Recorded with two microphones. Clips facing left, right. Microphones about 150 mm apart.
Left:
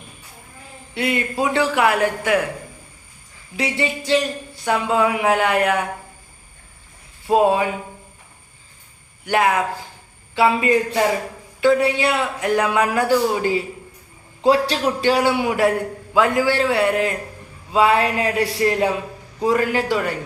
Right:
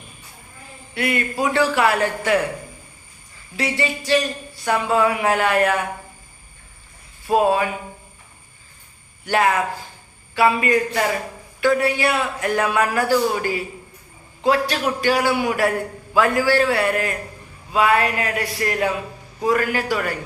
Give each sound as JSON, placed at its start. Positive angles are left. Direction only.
{"t": 0.9, "sound": "a man's voice", "side_deg": 20}
{"t": 3.6, "sound": "a man's voice", "side_deg": 20}
{"t": 7.3, "sound": "a man's voice", "side_deg": 20}
{"t": 9.2, "sound": "a man's voice", "side_deg": 15}